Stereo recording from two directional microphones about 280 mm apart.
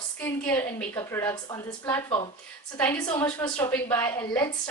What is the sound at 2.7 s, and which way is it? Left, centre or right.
A woman's voice, centre.